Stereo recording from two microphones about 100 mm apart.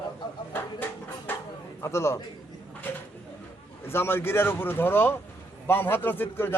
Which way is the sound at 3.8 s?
25° left (ahead or behind).